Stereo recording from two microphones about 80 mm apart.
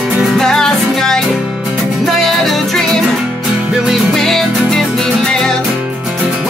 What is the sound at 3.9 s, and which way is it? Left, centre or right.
Music, centre.